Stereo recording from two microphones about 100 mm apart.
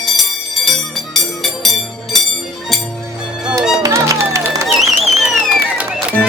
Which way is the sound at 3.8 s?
30° right (ahead or behind).